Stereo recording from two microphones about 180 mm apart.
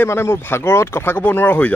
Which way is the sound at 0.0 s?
15° left (ahead or behind).